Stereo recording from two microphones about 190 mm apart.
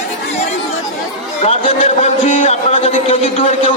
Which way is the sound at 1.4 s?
30° left (ahead or behind).